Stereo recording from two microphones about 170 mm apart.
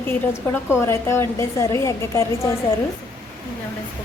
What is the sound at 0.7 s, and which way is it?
A woman's voice, 15° left (ahead or behind).